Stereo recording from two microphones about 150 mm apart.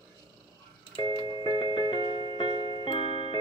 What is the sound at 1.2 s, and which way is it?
Music, 35° left (ahead or behind).